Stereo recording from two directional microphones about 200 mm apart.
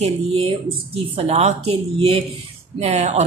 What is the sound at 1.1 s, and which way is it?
Speech, 35° right (ahead or behind).